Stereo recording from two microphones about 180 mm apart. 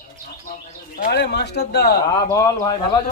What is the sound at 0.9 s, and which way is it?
Speech, 65° left (ahead or behind).